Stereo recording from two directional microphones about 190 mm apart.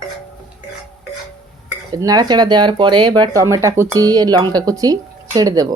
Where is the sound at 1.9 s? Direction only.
20° right (ahead or behind).